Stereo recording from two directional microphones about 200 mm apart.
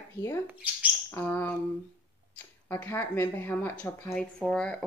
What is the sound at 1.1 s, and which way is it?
Speech, 10° left (ahead or behind).